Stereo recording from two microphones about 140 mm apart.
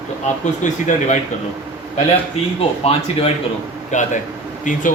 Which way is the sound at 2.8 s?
45° left (ahead or behind).